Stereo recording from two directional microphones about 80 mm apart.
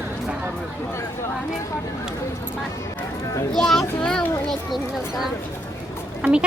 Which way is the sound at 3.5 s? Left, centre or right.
Centre.